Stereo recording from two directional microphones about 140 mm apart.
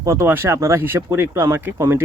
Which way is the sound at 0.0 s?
20° right (ahead or behind).